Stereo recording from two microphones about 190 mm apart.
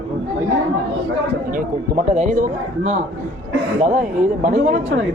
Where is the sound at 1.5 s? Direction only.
45° right (ahead or behind).